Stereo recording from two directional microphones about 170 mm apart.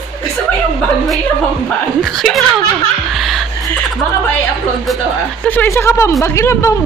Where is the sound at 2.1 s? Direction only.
Centre (ahead or behind).